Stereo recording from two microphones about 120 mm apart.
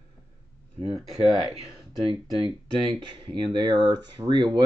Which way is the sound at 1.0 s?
Centre (ahead or behind).